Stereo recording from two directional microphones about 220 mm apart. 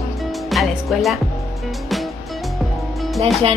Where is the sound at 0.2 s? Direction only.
Centre (ahead or behind).